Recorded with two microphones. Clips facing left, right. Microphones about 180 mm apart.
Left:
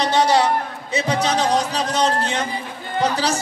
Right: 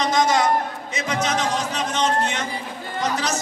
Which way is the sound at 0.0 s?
35° left (ahead or behind).